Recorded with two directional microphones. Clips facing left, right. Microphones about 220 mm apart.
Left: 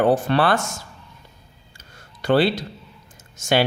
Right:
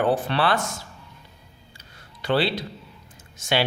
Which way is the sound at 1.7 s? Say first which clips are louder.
Left 4 dB; 45° left (ahead or behind).